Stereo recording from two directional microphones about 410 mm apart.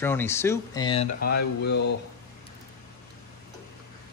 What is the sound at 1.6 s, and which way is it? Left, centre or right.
Speech, left.